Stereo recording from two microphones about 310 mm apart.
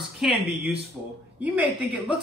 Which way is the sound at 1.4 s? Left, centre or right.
Centre.